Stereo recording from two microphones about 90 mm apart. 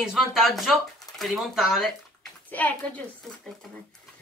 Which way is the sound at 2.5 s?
20° left (ahead or behind).